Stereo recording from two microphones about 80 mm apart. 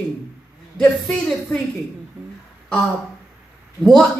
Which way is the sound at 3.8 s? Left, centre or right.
Centre.